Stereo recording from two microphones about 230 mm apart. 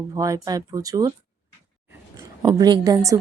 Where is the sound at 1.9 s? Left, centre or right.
Centre.